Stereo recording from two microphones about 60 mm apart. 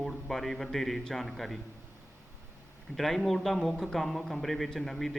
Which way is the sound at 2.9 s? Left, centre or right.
Centre.